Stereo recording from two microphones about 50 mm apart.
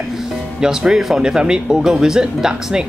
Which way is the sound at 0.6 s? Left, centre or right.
Centre.